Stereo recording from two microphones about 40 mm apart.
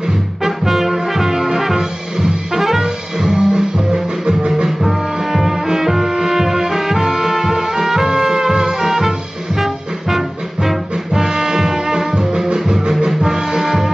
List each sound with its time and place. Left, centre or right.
0.4 s brass instrument: centre
2.6 s music: centre
4.6 s music: centre